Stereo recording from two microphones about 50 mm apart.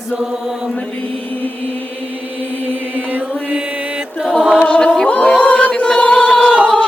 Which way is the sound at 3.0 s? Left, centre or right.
Right.